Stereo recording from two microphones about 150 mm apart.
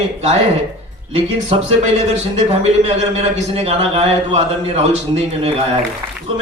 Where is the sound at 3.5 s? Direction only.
40° right (ahead or behind).